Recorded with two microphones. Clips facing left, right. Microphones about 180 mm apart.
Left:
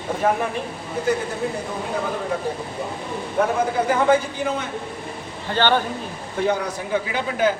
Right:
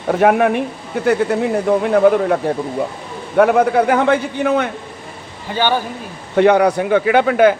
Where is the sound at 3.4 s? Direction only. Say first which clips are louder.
Right 9 dB; 70° right (ahead or behind).